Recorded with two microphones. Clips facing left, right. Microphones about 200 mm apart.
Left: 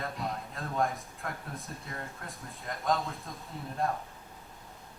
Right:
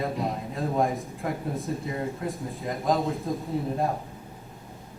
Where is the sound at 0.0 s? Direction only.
Centre (ahead or behind).